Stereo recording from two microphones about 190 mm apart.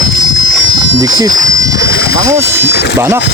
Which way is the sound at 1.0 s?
20° right (ahead or behind).